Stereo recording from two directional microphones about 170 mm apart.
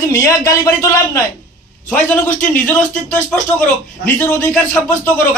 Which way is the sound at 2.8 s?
45° left (ahead or behind).